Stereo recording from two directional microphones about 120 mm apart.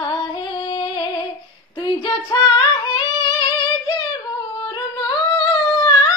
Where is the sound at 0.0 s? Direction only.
45° left (ahead or behind).